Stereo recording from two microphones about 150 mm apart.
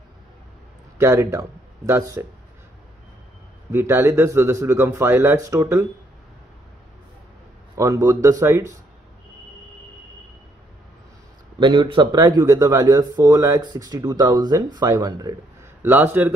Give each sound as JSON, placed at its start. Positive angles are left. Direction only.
{"t": 0.9, "sound": "speech", "side_deg": -20}
{"t": 3.7, "sound": "speech", "side_deg": -15}
{"t": 7.7, "sound": "speech", "side_deg": -20}
{"t": 11.6, "sound": "speech", "side_deg": -30}